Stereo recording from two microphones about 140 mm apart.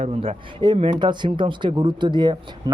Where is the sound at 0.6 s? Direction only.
35° right (ahead or behind).